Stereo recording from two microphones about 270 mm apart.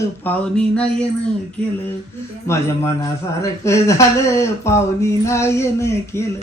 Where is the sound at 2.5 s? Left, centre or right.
Centre.